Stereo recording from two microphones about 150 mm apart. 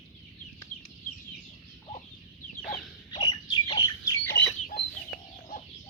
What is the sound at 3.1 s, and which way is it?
Bird, 30° left (ahead or behind).